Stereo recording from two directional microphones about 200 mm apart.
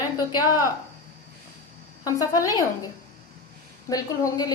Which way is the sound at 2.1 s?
15° left (ahead or behind).